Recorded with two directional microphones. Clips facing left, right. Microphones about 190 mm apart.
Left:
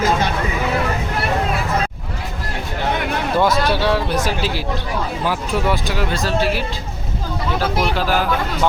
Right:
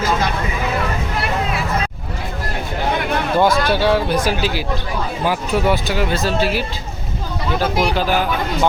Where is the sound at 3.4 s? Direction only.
Centre (ahead or behind).